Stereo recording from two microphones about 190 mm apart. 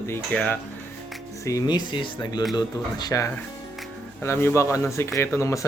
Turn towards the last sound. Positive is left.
turn(degrees=15)  # may be behind; listen again after turning